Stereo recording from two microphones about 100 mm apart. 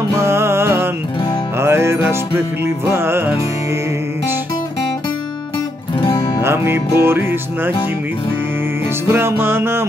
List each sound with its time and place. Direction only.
0.2 s music: 25° right (ahead or behind)
5.9 s music: 50° left (ahead or behind)
6.4 s music: 25° right (ahead or behind)
9.1 s music: 25° right (ahead or behind)